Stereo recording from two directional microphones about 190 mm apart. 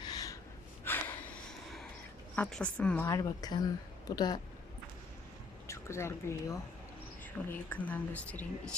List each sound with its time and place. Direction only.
0.0 s gasp: 20° left (ahead or behind)
2.3 s speech: 5° left (ahead or behind)
5.6 s speech: 15° left (ahead or behind)